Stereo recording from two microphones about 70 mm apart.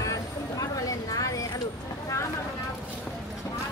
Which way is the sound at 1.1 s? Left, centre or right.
Left.